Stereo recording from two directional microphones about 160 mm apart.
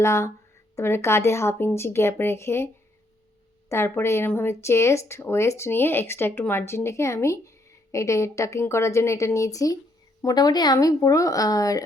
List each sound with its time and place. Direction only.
0.0 s speech: 15° left (ahead or behind)
3.7 s speech: 15° left (ahead or behind)